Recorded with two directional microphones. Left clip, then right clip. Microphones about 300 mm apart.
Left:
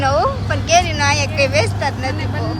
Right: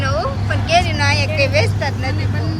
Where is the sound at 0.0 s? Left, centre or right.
Centre.